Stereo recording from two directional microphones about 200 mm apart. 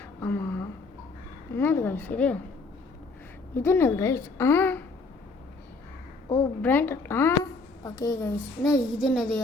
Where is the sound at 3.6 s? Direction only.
10° left (ahead or behind).